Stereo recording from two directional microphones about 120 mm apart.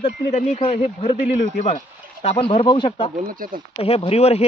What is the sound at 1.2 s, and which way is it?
Speech, 70° left (ahead or behind).